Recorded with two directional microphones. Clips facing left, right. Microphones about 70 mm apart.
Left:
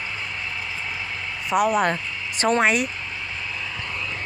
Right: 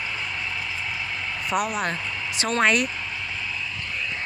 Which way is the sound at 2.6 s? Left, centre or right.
Centre.